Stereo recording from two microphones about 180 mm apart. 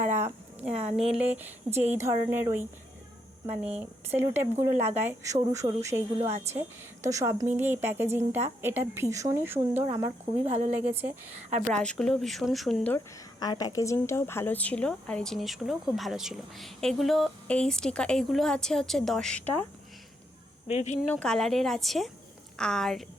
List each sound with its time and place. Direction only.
0.0 s a sound: 10° right (ahead or behind)
0.6 s speech: 5° right (ahead or behind)
11.7 s a woman's voice: 5° left (ahead or behind)
13.4 s a woman's voice: 25° left (ahead or behind); by 19.6 s 5° left (ahead or behind)
20.7 s speech: 40° left (ahead or behind)
21.0 s a woman's voice: 5° left (ahead or behind)